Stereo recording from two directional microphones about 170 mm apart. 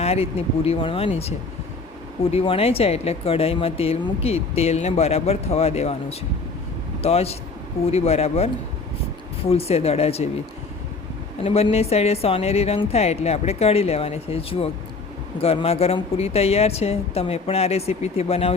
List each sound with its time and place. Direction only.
0.0 s speech: 35° left (ahead or behind)
2.3 s speech: 35° left (ahead or behind)
11.4 s speech: 35° left (ahead or behind)